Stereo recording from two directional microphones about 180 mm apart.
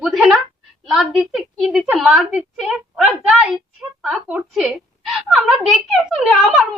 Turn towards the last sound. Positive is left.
turn(degrees=0)  # may be behind; listen again after turning